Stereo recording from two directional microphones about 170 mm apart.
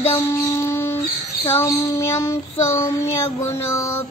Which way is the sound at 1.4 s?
15° left (ahead or behind).